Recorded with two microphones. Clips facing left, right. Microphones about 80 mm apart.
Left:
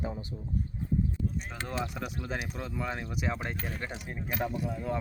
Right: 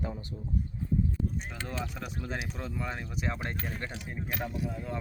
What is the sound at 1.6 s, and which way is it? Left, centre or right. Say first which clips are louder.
Speech: left 5 dB; centre.